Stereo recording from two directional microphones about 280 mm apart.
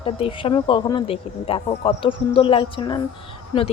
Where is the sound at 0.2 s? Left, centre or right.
Centre.